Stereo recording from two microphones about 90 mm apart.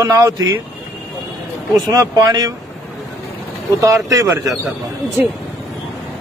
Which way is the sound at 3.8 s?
40° right (ahead or behind).